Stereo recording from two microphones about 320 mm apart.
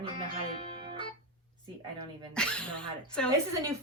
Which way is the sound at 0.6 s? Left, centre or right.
Centre.